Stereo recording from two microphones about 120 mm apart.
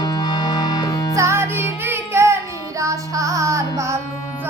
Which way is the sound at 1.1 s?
25° right (ahead or behind).